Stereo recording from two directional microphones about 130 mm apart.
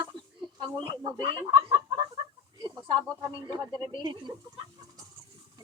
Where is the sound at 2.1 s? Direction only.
35° right (ahead or behind).